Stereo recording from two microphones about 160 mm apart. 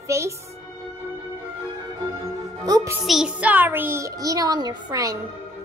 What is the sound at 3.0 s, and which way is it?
A child's voice, 5° right (ahead or behind).